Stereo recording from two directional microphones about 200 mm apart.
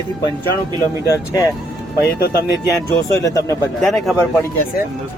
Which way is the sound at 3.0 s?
15° left (ahead or behind).